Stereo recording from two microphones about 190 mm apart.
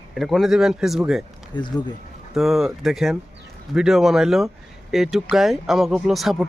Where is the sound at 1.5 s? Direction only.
25° left (ahead or behind).